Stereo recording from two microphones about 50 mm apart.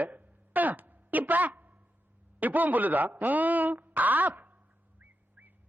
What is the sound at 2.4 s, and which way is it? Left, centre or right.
A woman's voice, right.